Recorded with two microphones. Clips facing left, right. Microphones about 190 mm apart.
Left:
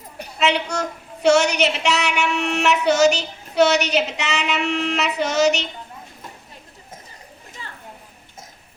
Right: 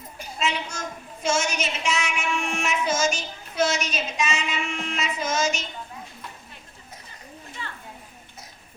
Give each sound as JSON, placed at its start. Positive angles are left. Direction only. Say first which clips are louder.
{"t": 0.2, "sound": "a woman's voice", "louder": "left 7 dB", "side_deg": 65}